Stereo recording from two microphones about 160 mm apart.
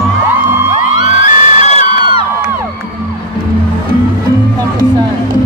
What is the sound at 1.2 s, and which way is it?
Music, 45° left (ahead or behind).